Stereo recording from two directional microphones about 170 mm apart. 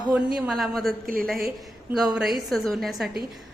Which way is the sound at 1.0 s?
55° right (ahead or behind).